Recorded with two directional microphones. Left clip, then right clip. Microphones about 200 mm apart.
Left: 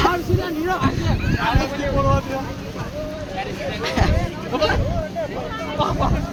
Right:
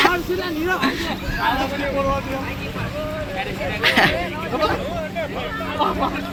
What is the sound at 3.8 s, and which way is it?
Speech, 5° left (ahead or behind).